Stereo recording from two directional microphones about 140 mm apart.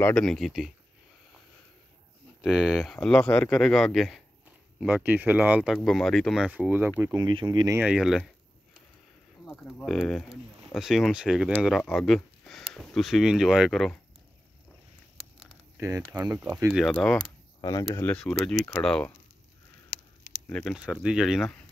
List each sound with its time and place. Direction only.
0.0 s speech: 5° left (ahead or behind)
2.4 s speech: 5° right (ahead or behind)
4.7 s speech: 10° right (ahead or behind)
5.8 s speech: centre (ahead or behind)
7.2 s speech: 35° right (ahead or behind)
7.8 s speech: 5° right (ahead or behind)
9.5 s speech: 5° left (ahead or behind)
15.8 s speech: 25° right (ahead or behind)
16.3 s speech: 10° right (ahead or behind)
16.8 s speech: 5° left (ahead or behind)
17.6 s speech: 25° left (ahead or behind)
18.1 s speech: 5° left (ahead or behind)
20.4 s speech: 5° left (ahead or behind)
20.7 s speech: 5° right (ahead or behind)